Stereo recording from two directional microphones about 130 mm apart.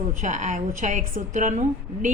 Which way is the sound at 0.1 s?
75° right (ahead or behind).